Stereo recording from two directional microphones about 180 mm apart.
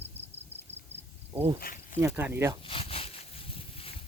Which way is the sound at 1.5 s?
50° left (ahead or behind).